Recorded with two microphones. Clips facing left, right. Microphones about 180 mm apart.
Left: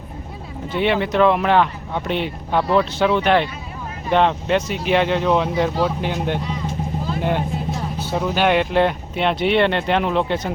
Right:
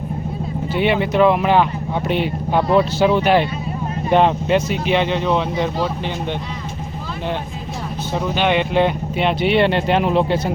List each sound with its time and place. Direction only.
0.7 s speech: 5° right (ahead or behind)
8.1 s speech: centre (ahead or behind)